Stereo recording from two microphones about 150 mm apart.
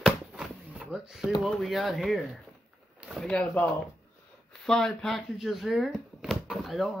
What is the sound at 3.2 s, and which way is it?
Speech, 5° left (ahead or behind).